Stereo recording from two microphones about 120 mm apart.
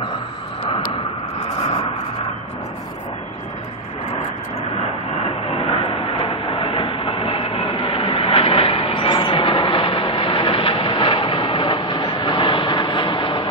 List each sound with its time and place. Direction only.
5.5 s train: 50° left (ahead or behind)